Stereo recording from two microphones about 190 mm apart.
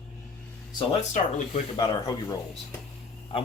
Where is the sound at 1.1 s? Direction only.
40° left (ahead or behind).